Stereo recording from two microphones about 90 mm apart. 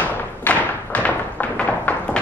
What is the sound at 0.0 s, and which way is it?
Thump, 20° left (ahead or behind).